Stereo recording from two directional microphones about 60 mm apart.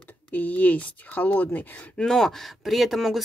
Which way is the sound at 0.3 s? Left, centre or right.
Left.